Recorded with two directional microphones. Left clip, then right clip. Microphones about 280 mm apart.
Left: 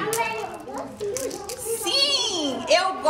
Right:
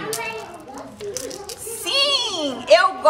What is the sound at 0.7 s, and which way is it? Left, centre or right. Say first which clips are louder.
Children playing: left 2 dB; centre.